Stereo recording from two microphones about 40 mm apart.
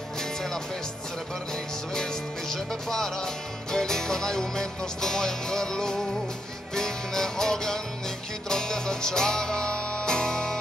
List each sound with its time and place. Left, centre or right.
0.2 s music: centre
2.5 s music: centre